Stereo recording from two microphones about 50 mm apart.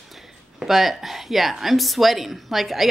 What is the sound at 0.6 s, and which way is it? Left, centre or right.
Speech, centre.